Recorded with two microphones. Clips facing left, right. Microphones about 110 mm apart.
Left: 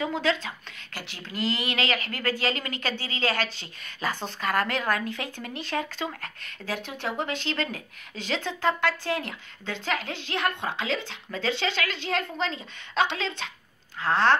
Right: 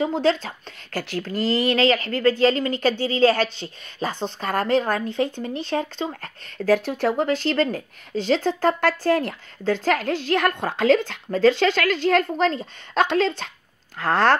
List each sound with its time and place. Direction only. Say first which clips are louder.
0.0 s a woman's voice: right 6 dB; 35° right (ahead or behind)